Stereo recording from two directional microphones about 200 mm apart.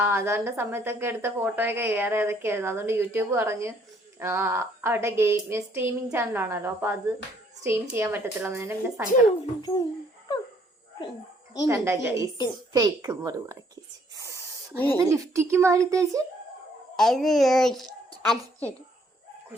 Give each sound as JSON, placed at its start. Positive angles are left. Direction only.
{"t": 0.0, "sound": "a woman's voice", "side_deg": -10}
{"t": 9.6, "sound": "a child's voice", "side_deg": 20}
{"t": 11.7, "sound": "a woman's voice", "side_deg": -15}
{"t": 14.2, "sound": "spray", "side_deg": -15}
{"t": 14.9, "sound": "a woman's voice", "side_deg": -15}
{"t": 17.0, "sound": "a child's voice", "side_deg": 0}